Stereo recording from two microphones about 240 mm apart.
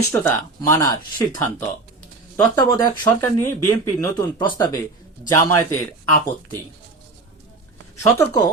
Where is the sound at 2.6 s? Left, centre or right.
Centre.